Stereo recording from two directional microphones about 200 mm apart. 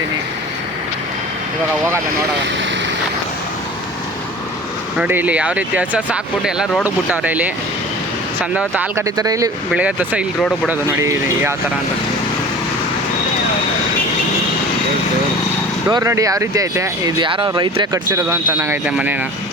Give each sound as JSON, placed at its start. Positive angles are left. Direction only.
{"t": 4.9, "sound": "speech", "side_deg": -10}
{"t": 8.5, "sound": "speech", "side_deg": -10}
{"t": 15.9, "sound": "speech", "side_deg": -15}